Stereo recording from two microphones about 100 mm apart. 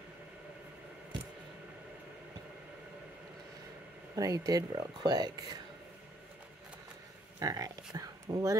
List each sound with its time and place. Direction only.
4.1 s speech: 35° right (ahead or behind)
7.3 s speech: 35° right (ahead or behind)